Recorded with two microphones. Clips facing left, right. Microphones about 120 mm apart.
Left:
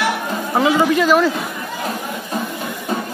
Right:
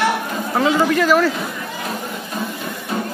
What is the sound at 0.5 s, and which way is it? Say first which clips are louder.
Speech: left 1 dB; 10° left (ahead or behind).